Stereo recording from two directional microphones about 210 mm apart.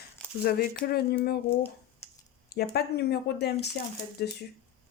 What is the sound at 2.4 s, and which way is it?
Speech, 50° left (ahead or behind).